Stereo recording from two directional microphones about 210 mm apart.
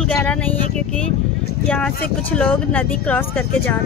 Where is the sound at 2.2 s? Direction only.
5° left (ahead or behind).